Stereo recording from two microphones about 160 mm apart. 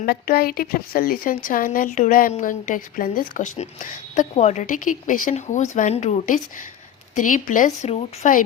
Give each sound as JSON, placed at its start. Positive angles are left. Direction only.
{"t": 0.0, "sound": "a woman's voice", "side_deg": 70}